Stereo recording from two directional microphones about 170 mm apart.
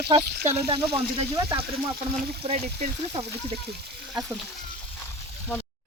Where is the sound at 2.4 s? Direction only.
30° right (ahead or behind).